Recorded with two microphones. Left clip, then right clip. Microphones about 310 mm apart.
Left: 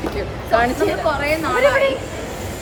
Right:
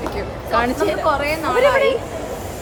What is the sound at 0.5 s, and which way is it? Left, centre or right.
Speech, centre.